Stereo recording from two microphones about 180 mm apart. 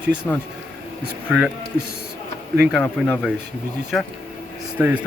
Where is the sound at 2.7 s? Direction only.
Centre (ahead or behind).